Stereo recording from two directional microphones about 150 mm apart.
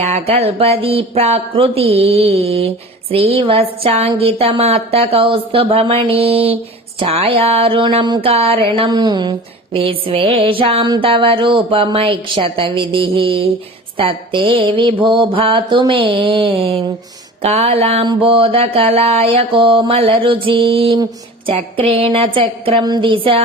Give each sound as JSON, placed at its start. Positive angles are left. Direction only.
{"t": 0.0, "sound": "speech", "side_deg": -45}
{"t": 18.0, "sound": "speech", "side_deg": -35}